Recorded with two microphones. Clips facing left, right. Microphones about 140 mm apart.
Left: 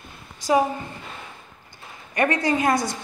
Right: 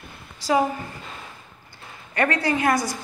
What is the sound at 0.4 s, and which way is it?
Speech, 20° left (ahead or behind).